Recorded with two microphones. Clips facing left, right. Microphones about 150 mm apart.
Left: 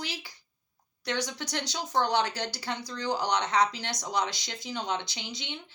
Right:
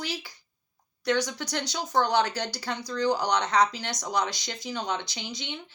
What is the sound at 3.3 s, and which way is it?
Speech, 20° left (ahead or behind).